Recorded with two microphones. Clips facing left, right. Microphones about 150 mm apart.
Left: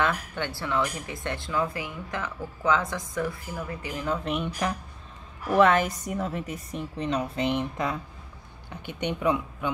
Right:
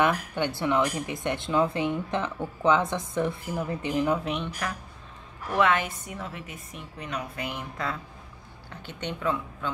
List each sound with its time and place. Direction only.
0.0 s speech: 15° right (ahead or behind)
4.2 s speech: centre (ahead or behind)
5.5 s a woman's voice: 40° left (ahead or behind); by 9.7 s 15° left (ahead or behind)